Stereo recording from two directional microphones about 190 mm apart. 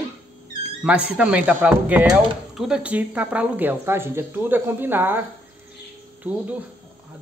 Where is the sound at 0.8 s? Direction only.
5° right (ahead or behind).